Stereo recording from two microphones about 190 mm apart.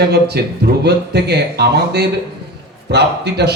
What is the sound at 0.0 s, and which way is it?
A man's voice, 60° right (ahead or behind).